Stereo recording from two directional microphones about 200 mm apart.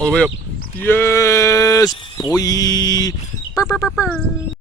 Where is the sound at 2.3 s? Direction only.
15° left (ahead or behind).